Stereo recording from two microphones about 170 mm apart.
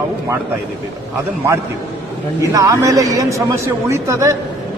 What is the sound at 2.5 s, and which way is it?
A man's voice, 20° right (ahead or behind).